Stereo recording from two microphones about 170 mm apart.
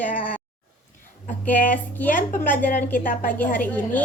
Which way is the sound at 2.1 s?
50° left (ahead or behind).